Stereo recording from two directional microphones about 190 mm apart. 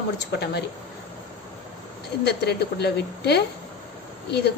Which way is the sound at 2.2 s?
60° left (ahead or behind).